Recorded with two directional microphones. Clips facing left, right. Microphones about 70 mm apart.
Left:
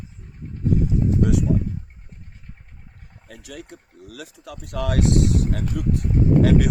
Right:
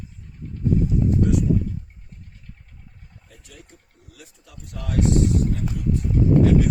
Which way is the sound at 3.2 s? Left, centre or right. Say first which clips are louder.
Left 11 dB; left.